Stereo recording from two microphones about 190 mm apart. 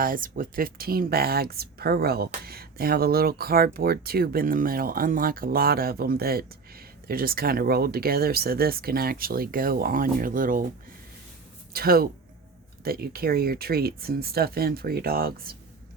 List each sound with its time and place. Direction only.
0.0 s speech: 45° right (ahead or behind)
11.7 s speech: 55° right (ahead or behind)